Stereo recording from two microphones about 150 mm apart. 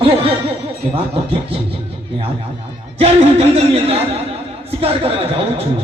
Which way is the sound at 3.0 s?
45° right (ahead or behind).